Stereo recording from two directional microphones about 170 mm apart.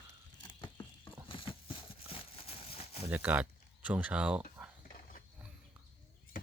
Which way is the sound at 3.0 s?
10° right (ahead or behind).